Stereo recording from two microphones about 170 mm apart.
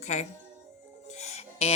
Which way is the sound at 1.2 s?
40° left (ahead or behind).